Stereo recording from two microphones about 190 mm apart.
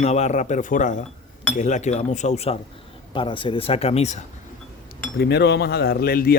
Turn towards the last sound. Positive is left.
turn(degrees=55)  # may be behind; listen again after turning